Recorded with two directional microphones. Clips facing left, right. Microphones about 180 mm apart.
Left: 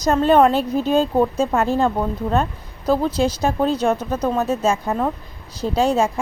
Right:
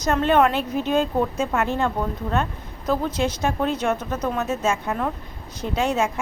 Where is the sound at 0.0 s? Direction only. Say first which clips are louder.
Left 4 dB; 35° left (ahead or behind).